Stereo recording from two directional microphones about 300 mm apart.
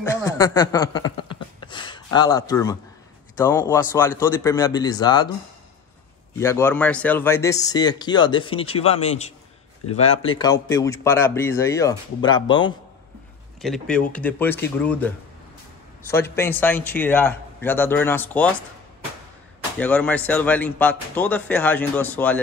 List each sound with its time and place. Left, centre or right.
0.0 s speech: centre
6.3 s speech: centre
13.6 s speech: centre
19.8 s speech: centre